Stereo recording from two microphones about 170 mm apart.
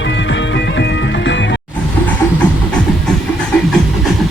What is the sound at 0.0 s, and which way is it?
Music, 90° left.